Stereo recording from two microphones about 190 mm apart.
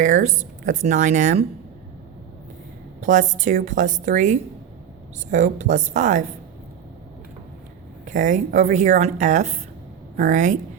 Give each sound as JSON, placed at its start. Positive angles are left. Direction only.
{"t": 0.0, "sound": "speech", "side_deg": -40}
{"t": 3.0, "sound": "speech", "side_deg": -40}
{"t": 8.0, "sound": "speech", "side_deg": -40}